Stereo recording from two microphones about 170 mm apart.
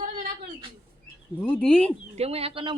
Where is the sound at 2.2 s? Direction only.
35° right (ahead or behind).